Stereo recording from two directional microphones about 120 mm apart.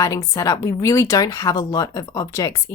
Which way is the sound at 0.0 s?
25° left (ahead or behind).